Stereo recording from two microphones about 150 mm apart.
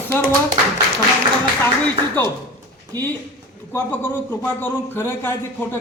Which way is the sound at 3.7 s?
10° left (ahead or behind).